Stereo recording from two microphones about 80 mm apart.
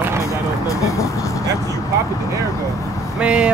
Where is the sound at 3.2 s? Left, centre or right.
Centre.